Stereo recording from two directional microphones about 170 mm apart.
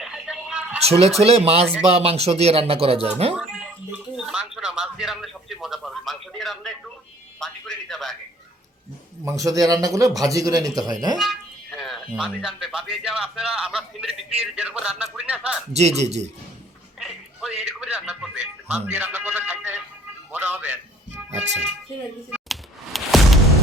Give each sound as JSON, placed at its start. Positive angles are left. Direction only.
{"t": 0.0, "sound": "a sound", "side_deg": -5}
{"t": 0.9, "sound": "speech", "side_deg": -35}
{"t": 3.3, "sound": "a man's voice", "side_deg": -5}
{"t": 9.2, "sound": "speech", "side_deg": -20}
{"t": 11.2, "sound": "speech", "side_deg": 0}
{"t": 15.7, "sound": "speech", "side_deg": -40}
{"t": 17.6, "sound": "speech", "side_deg": -5}
{"t": 22.3, "sound": "music", "side_deg": 0}